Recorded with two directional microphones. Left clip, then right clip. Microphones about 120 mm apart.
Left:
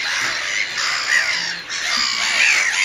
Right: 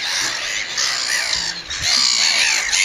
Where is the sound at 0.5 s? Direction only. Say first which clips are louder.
Left 1 dB; 15° right (ahead or behind).